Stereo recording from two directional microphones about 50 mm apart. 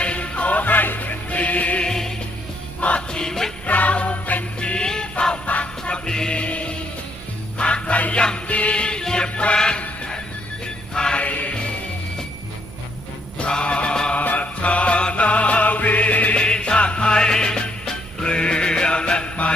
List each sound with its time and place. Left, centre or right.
0.0 s music: left
1.8 s music: centre
3.7 s jingle bell: left
4.6 s music: centre
10.9 s music: centre
11.2 s music: left
13.4 s mantra: left
14.2 s music: left
16.4 s music: centre